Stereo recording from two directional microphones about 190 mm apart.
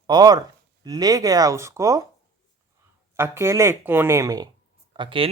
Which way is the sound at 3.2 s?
15° right (ahead or behind).